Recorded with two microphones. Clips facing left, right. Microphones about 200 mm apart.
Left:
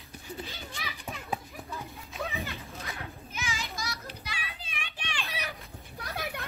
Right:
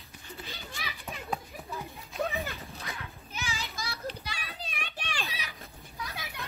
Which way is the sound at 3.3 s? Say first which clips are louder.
Left 1 dB; 35° right (ahead or behind).